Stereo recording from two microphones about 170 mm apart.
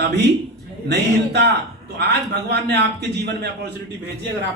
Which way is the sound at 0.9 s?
75° right (ahead or behind).